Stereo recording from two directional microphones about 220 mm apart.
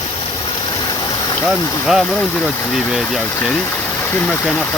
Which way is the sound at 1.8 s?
Centre (ahead or behind).